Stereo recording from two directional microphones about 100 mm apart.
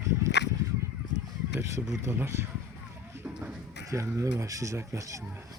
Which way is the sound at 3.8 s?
30° right (ahead or behind).